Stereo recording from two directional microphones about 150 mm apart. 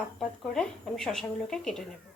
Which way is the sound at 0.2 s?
5° left (ahead or behind).